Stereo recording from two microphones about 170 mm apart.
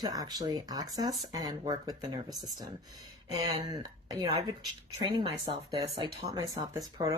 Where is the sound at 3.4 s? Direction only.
20° right (ahead or behind).